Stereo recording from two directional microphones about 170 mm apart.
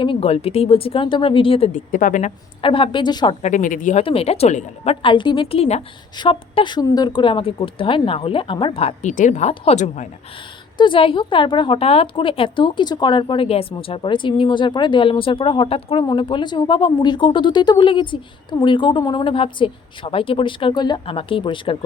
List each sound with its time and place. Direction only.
0.0 s speech: 35° left (ahead or behind)
1.7 s a woman's voice: 50° left (ahead or behind)
2.6 s a woman's voice: 30° left (ahead or behind)
3.4 s a woman's voice: 50° left (ahead or behind)
4.0 s speech: 35° left (ahead or behind)
10.8 s a woman's voice: 30° left (ahead or behind)